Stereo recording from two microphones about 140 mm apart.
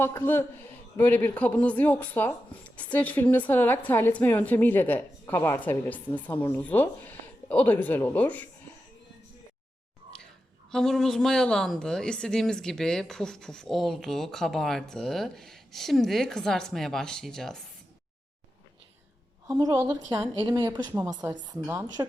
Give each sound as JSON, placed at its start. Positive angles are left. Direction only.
{"t": 0.0, "sound": "speech", "side_deg": 20}
{"t": 10.7, "sound": "speech", "side_deg": 5}
{"t": 19.5, "sound": "a woman's voice", "side_deg": -20}